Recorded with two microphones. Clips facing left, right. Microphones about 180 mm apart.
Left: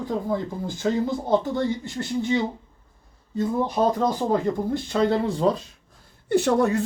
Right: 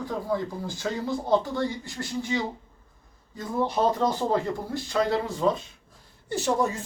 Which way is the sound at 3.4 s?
15° left (ahead or behind).